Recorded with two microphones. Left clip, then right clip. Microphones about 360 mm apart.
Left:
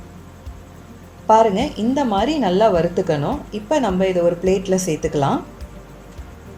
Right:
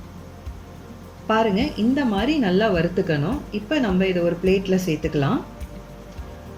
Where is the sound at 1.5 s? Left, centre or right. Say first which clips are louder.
Left 2 dB; centre.